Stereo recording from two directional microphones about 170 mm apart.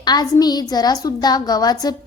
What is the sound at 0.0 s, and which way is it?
Child singing, 25° left (ahead or behind).